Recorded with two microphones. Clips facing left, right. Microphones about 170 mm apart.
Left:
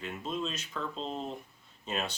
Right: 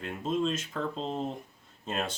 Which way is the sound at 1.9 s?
50° right (ahead or behind).